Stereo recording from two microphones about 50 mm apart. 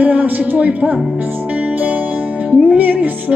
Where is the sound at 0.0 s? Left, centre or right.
Right.